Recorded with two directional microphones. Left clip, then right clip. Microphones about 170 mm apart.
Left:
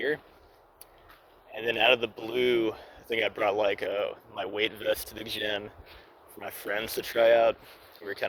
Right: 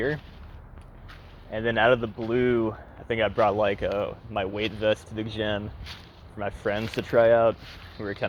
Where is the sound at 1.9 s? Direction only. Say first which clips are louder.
Right 2 dB; 30° left (ahead or behind).